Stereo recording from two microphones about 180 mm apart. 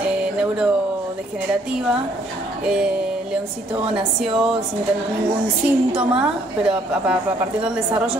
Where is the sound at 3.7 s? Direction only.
5° right (ahead or behind).